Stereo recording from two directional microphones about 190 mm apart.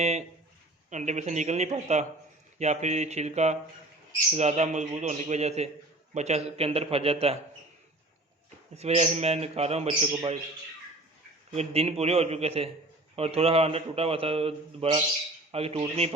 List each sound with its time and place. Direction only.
0.0 s a sound: 35° right (ahead or behind)
0.9 s a man's voice: 40° right (ahead or behind)
8.7 s a man's voice: 35° right (ahead or behind)
11.5 s a man's voice: 30° right (ahead or behind)